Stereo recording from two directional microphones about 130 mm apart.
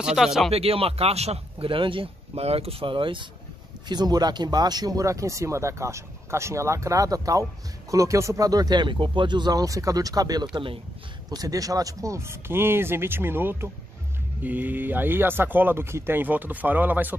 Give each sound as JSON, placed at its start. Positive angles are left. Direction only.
{"t": 0.0, "sound": "speech", "side_deg": -5}
{"t": 0.5, "sound": "speech", "side_deg": -50}
{"t": 10.5, "sound": "speech", "side_deg": -40}
{"t": 11.2, "sound": "speech", "side_deg": -30}